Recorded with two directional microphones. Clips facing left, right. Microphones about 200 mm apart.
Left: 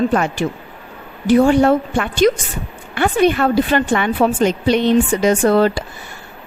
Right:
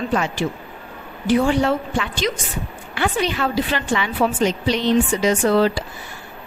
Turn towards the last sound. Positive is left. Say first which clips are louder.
# left 3 dB
turn(degrees=50)  # may be behind; listen again after turning